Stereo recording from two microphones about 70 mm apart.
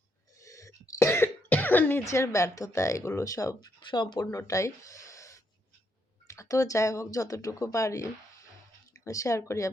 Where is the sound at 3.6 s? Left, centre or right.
Left.